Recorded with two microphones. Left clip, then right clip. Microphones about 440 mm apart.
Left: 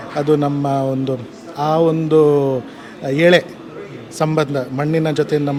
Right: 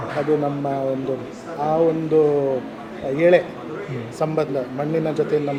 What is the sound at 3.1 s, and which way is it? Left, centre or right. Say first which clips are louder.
A man's voice: left 3 dB; left.